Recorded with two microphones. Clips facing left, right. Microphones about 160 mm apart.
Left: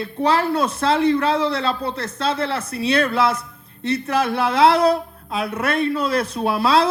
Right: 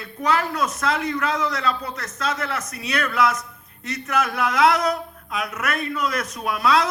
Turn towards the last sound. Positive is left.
turn(degrees=30)  # may be behind; listen again after turning